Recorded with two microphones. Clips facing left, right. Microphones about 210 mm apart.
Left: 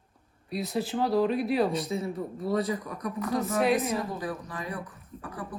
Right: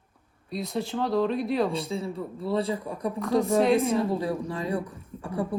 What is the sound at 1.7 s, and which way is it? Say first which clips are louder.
A woman's voice: even; 30° right (ahead or behind).